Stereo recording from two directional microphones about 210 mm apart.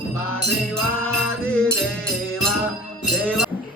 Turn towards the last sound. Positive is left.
turn(degrees=0)  # may be behind; listen again after turning